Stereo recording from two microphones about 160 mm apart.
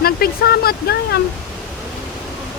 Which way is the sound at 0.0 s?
75° left (ahead or behind).